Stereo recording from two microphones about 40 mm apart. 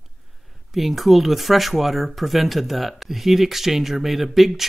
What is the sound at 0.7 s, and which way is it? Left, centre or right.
Speech, centre.